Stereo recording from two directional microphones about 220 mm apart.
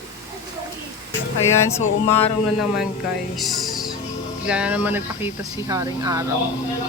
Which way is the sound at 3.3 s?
Centre (ahead or behind).